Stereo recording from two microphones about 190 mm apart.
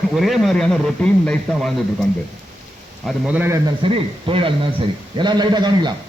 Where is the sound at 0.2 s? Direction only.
Centre (ahead or behind).